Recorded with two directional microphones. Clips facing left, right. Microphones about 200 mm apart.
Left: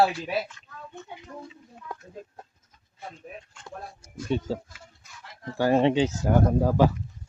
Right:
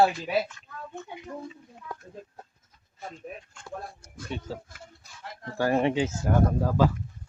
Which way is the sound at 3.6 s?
60° right (ahead or behind).